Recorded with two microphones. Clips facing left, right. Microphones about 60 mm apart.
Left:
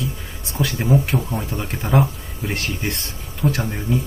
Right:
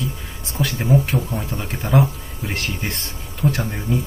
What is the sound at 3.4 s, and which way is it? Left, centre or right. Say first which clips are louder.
Speech: even; centre.